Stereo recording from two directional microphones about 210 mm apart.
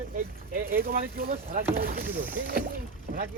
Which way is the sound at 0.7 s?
45° right (ahead or behind).